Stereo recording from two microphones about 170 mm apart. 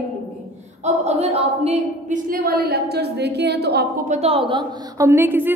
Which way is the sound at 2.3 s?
60° right (ahead or behind).